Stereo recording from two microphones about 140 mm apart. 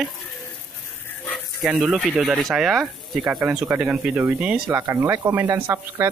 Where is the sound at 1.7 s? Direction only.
5° right (ahead or behind).